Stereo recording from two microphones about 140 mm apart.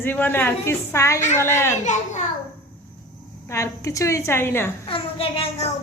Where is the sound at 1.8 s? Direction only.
60° left (ahead or behind).